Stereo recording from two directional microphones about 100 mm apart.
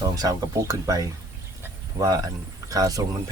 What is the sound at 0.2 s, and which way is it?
Speech, 40° right (ahead or behind).